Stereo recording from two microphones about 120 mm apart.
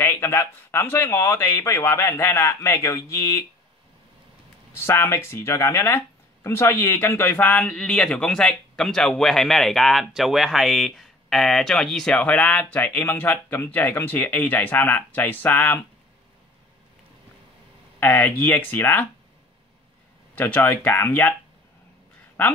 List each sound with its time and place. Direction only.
0.0 s speech: 20° left (ahead or behind)
4.7 s speech: 20° left (ahead or behind)
18.0 s speech: 15° left (ahead or behind)
20.3 s speech: 15° left (ahead or behind)